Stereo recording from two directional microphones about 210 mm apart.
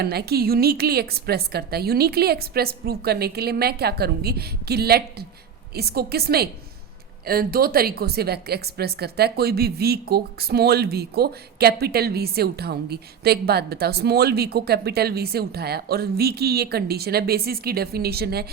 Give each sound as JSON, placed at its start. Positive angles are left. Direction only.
{"t": 0.0, "sound": "a woman's voice", "side_deg": -50}